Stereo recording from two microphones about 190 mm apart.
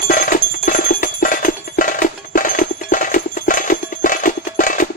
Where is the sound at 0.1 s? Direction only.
45° left (ahead or behind).